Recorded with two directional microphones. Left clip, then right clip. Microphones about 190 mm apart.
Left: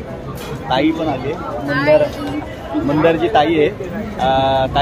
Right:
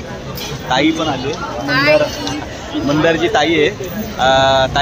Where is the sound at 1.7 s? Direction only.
25° left (ahead or behind).